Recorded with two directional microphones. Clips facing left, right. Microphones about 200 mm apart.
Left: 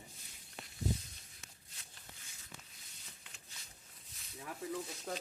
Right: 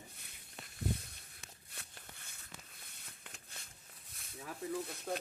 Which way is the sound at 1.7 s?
60° right (ahead or behind).